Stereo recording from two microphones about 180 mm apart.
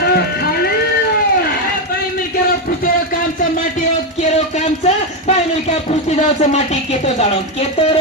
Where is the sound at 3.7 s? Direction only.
40° left (ahead or behind).